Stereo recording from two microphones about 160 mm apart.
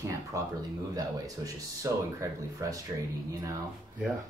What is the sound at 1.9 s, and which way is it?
Speech, 20° right (ahead or behind).